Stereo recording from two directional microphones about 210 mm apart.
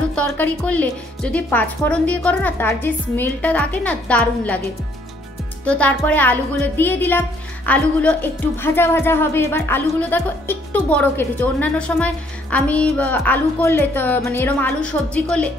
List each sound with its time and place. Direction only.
0.1 s speech: 5° left (ahead or behind)
5.7 s speech: 5° left (ahead or behind)